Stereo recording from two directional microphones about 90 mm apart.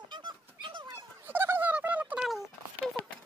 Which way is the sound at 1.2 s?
25° right (ahead or behind).